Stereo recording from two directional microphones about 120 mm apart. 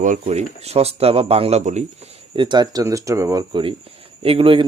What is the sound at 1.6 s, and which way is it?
Speech, 75° right (ahead or behind).